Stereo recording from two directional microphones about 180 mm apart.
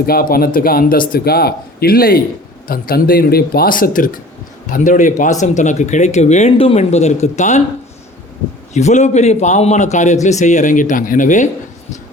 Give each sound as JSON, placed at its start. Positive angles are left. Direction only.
{"t": 0.0, "sound": "a man's voice", "side_deg": 55}
{"t": 8.7, "sound": "speech", "side_deg": 40}